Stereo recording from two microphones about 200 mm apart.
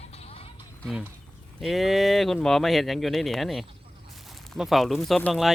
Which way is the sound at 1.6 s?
Centre (ahead or behind).